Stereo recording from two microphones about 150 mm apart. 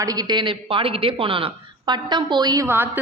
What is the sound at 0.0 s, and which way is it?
A man's voice, 25° right (ahead or behind).